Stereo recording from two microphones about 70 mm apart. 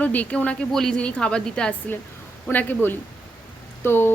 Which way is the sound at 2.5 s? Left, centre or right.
Left.